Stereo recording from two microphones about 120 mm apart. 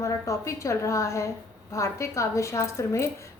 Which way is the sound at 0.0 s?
25° left (ahead or behind).